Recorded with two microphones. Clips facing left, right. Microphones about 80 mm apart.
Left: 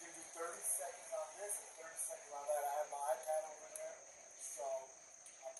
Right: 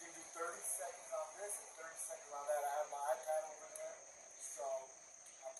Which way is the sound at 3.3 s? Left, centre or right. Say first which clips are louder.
Even; centre.